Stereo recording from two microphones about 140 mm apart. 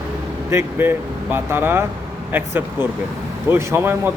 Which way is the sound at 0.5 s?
15° right (ahead or behind).